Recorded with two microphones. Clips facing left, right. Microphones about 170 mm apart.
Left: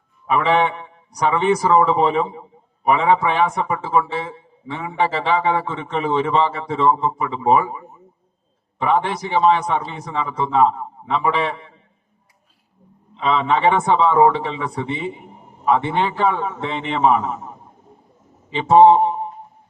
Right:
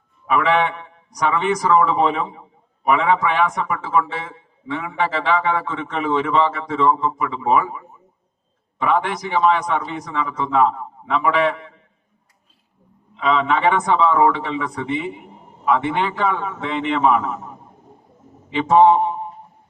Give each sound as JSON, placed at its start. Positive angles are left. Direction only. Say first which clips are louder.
{"t": 0.3, "sound": "a man's voice", "louder": "left 1 dB", "side_deg": 30}
{"t": 13.1, "sound": "a man's voice", "louder": "even", "side_deg": 30}
{"t": 18.5, "sound": "a man's voice", "louder": "left 2 dB", "side_deg": 30}